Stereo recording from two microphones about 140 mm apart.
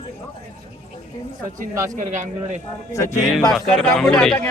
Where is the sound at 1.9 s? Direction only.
60° right (ahead or behind).